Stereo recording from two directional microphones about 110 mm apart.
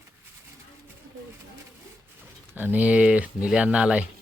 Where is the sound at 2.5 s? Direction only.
15° right (ahead or behind).